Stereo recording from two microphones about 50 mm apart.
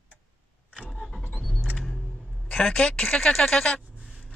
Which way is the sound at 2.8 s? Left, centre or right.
Centre.